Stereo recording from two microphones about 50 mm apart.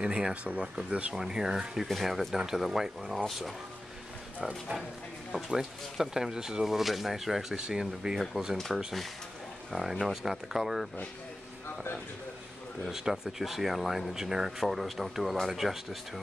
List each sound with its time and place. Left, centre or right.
0.0 s speech: centre
1.1 s speech: centre
4.4 s speech: right
5.6 s speech: centre
8.2 s speech: centre
12.8 s speech: centre